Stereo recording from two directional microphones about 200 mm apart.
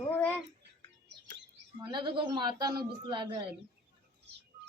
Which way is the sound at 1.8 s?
25° right (ahead or behind).